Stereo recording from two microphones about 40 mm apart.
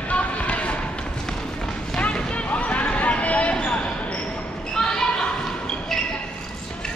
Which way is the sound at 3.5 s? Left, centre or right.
Left.